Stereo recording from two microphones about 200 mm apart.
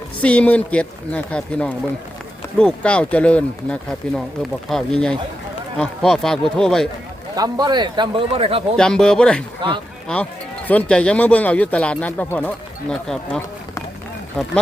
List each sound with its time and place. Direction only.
0.2 s speech: 5° left (ahead or behind)
7.3 s speech: 20° right (ahead or behind)
8.7 s speech: 5° left (ahead or behind)
9.6 s speech: 20° right (ahead or behind)
10.7 s speech: 5° left (ahead or behind)